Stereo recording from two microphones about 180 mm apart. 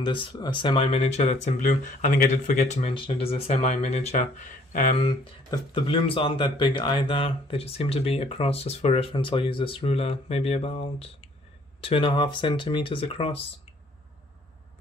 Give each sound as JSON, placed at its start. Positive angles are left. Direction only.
{"t": 0.0, "sound": "speech", "side_deg": 25}
{"t": 5.0, "sound": "speech", "side_deg": 30}